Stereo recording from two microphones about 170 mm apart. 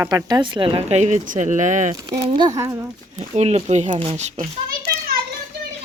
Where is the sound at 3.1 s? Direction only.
40° right (ahead or behind).